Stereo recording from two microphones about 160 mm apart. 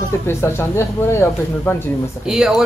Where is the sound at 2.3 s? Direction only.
5° right (ahead or behind).